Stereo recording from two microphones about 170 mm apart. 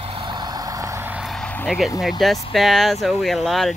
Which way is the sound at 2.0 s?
Centre (ahead or behind).